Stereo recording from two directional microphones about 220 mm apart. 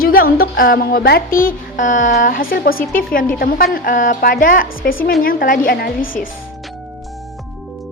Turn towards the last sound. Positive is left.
turn(degrees=40)  # may be behind; listen again after turning